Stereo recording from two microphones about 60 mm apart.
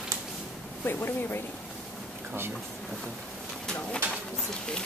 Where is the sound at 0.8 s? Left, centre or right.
Left.